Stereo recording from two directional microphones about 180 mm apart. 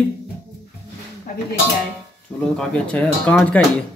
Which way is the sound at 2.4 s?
5° left (ahead or behind).